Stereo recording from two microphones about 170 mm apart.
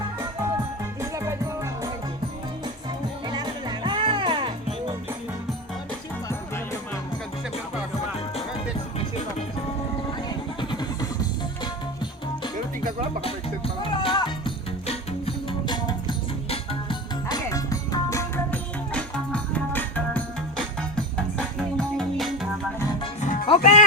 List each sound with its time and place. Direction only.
1.1 s music: 15° right (ahead or behind)
3.2 s music: 25° right (ahead or behind)
10.2 s music: 25° left (ahead or behind)
13.8 s music: 30° left (ahead or behind); by 22.3 s 5° left (ahead or behind)
23.2 s music: 50° left (ahead or behind)
23.5 s music: 40° left (ahead or behind)